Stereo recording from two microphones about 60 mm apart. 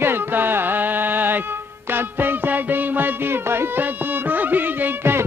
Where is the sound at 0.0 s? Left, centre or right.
Right.